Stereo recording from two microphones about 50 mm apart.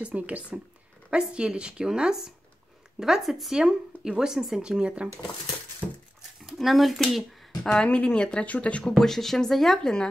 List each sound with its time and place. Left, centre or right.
0.0 s speech: right; by 3.5 s centre
3.5 s speech: centre
6.4 s speech: centre
7.6 s speech: centre
8.8 s speech: centre